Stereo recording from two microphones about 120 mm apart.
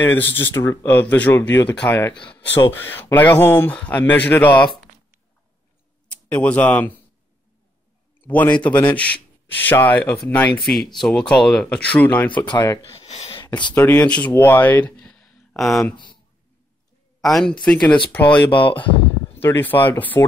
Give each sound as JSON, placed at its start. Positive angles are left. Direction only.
{"t": 0.1, "sound": "speech", "side_deg": 20}
{"t": 6.0, "sound": "speech", "side_deg": 10}
{"t": 8.2, "sound": "speech", "side_deg": 15}
{"t": 10.6, "sound": "speech", "side_deg": 0}
{"t": 12.4, "sound": "speech", "side_deg": 35}
{"t": 13.0, "sound": "a sound", "side_deg": 65}
{"t": 13.7, "sound": "speech", "side_deg": 15}
{"t": 17.2, "sound": "speech", "side_deg": 0}
{"t": 18.3, "sound": "speech", "side_deg": 45}
{"t": 19.3, "sound": "speech", "side_deg": 15}